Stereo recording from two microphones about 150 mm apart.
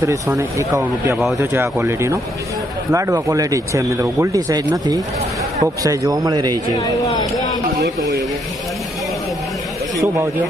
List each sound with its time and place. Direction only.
0.3 s speech: 20° right (ahead or behind)
1.1 s speech: centre (ahead or behind)
1.4 s speech: 15° right (ahead or behind)